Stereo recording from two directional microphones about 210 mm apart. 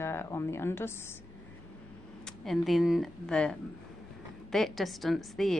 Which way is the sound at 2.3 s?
Centre (ahead or behind).